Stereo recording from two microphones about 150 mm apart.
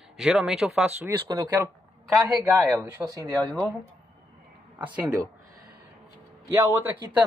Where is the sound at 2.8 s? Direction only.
15° right (ahead or behind).